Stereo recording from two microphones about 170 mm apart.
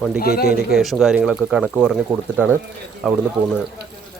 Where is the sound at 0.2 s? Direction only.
60° left (ahead or behind).